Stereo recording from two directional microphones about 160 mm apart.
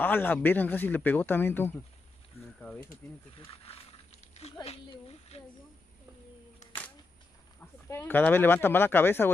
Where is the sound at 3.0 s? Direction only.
15° left (ahead or behind).